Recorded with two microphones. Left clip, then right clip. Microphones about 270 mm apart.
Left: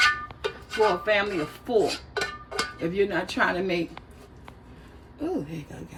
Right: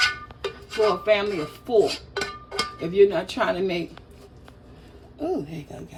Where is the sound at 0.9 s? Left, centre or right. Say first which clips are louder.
Right 2 dB; centre.